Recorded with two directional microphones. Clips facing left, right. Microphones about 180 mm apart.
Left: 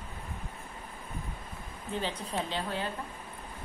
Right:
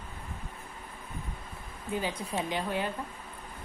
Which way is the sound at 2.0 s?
10° right (ahead or behind).